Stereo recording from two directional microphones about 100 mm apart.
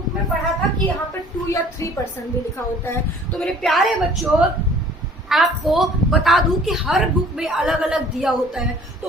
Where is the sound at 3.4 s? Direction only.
Centre (ahead or behind).